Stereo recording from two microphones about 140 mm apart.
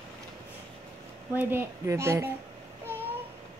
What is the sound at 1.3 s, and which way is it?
Speech, 15° right (ahead or behind).